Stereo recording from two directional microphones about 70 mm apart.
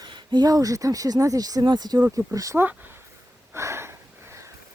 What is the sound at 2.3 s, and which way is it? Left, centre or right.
Speech, right.